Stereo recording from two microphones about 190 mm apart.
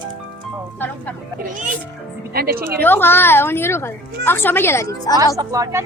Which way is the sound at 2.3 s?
50° right (ahead or behind).